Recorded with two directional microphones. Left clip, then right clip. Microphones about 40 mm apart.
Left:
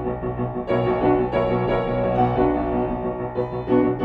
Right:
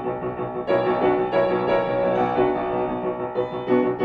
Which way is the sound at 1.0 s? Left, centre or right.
Right.